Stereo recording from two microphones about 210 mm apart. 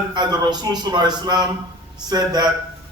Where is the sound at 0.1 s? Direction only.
20° right (ahead or behind).